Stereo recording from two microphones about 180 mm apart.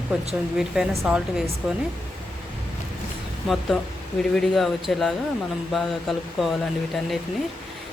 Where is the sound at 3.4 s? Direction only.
Centre (ahead or behind).